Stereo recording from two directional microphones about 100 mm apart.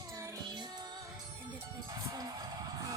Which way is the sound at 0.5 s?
45° right (ahead or behind).